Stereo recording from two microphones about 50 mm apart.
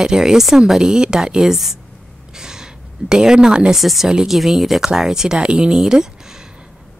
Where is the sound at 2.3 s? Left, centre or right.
Centre.